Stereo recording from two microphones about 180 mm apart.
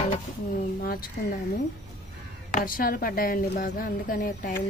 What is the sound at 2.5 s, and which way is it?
A woman's voice, 45° left (ahead or behind).